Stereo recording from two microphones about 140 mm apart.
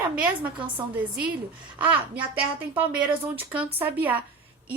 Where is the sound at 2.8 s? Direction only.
15° right (ahead or behind).